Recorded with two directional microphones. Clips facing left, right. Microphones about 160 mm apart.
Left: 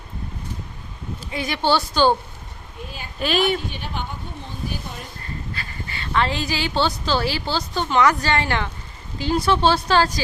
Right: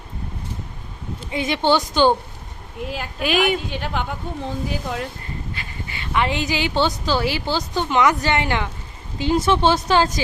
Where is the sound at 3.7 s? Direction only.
90° right.